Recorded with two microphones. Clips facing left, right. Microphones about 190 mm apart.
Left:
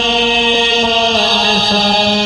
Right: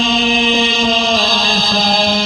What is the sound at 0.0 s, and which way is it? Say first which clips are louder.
Chant: left 1 dB; 70° left (ahead or behind).